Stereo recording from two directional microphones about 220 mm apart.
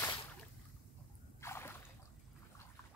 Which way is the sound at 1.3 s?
10° left (ahead or behind).